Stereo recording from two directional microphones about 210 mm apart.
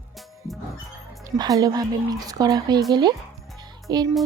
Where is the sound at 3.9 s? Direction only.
20° right (ahead or behind).